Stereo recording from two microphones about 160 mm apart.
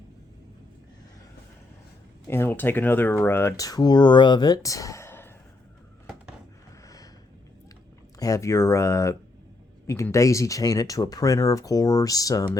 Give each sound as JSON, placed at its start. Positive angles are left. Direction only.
{"t": 2.2, "sound": "speech", "side_deg": 15}
{"t": 6.8, "sound": "a sound", "side_deg": 20}
{"t": 8.2, "sound": "speech", "side_deg": 20}